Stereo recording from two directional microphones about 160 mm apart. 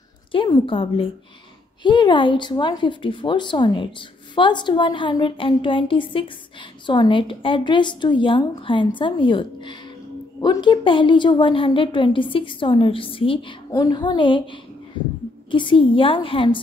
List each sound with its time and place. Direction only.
0.3 s a woman's voice: 30° left (ahead or behind)